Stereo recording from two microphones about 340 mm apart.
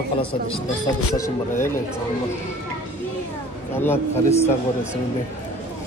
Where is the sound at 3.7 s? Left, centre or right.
Centre.